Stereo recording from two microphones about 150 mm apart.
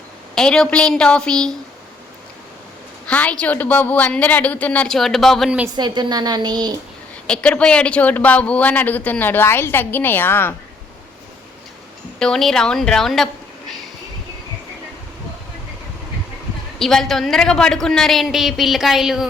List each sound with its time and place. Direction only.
0.3 s a man's voice: 5° left (ahead or behind)
3.1 s speech: 10° left (ahead or behind)
5.7 s a woman's voice: 30° right (ahead or behind)
7.3 s speech: 5° left (ahead or behind)
12.2 s a woman's voice: 5° left (ahead or behind)
16.7 s a man's voice: 5° left (ahead or behind)